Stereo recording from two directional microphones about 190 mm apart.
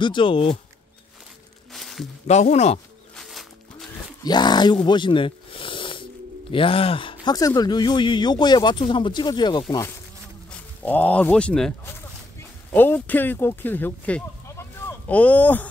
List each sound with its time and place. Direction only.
0.0 s speech: 25° left (ahead or behind)
1.7 s music: centre (ahead or behind)
2.2 s speech: 35° left (ahead or behind)
3.2 s music: centre (ahead or behind)
4.2 s speech: 20° left (ahead or behind)
4.8 s a sound: 25° left (ahead or behind)
6.5 s speech: 30° left (ahead or behind)
10.8 s speech: 10° left (ahead or behind)